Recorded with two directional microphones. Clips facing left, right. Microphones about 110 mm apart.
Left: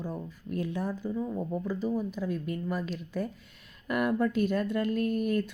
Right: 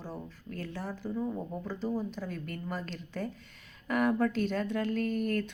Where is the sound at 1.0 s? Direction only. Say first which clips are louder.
Left 2 dB; centre (ahead or behind).